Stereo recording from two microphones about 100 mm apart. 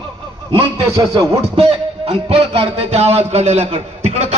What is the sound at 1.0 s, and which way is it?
Music, 35° right (ahead or behind).